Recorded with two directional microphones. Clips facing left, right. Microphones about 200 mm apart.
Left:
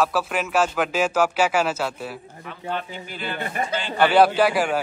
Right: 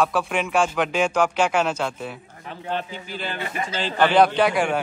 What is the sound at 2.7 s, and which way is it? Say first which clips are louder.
Speech: right 1 dB; 45° left (ahead or behind).